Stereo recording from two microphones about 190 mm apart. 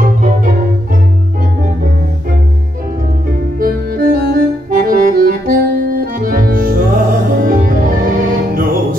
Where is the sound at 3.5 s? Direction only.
50° right (ahead or behind).